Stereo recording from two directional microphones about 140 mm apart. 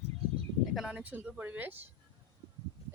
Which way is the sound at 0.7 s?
5° right (ahead or behind).